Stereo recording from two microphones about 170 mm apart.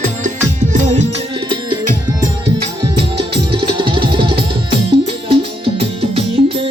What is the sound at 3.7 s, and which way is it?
Music, 30° right (ahead or behind).